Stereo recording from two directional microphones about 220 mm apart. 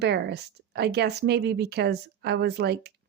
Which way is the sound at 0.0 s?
50° right (ahead or behind).